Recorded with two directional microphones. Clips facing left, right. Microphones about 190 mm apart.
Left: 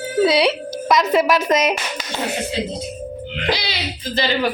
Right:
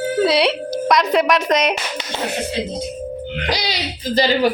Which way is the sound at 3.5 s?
40° right (ahead or behind).